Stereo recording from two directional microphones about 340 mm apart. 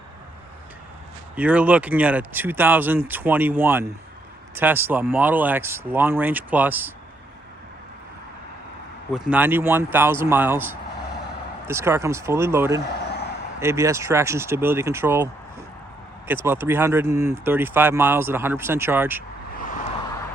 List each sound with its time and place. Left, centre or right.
1.4 s speech: centre
9.1 s speech: centre
19.5 s vehicle: left